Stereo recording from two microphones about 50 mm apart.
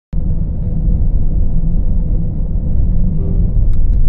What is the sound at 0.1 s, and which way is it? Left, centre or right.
Vehicle, centre.